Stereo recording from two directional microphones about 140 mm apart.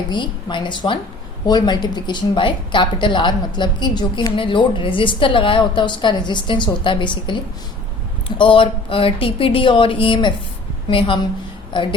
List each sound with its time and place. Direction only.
0.1 s a woman's voice: 35° left (ahead or behind)
8.4 s a woman's voice: 40° left (ahead or behind)